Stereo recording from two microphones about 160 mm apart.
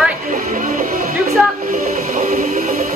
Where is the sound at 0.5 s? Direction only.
55° right (ahead or behind).